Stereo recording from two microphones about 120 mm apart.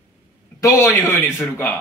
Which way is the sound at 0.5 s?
30° left (ahead or behind).